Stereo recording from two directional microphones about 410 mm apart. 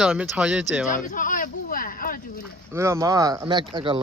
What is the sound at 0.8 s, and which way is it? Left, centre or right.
Speech, centre.